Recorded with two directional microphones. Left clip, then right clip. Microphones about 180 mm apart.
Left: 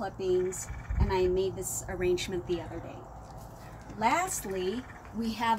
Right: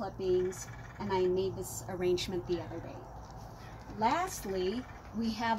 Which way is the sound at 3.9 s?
Centre (ahead or behind).